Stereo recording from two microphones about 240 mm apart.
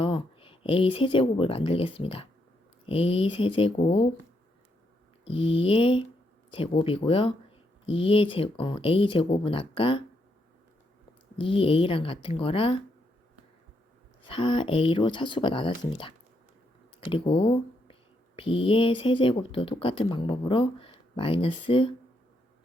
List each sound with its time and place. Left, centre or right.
0.0 s speech: left
5.2 s speech: left
11.3 s speech: left
14.3 s speech: left